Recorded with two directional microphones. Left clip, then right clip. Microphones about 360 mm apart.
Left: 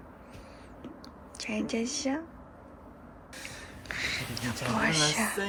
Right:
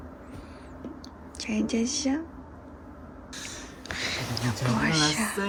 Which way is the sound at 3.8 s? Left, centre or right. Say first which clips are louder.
Right 2 dB; centre.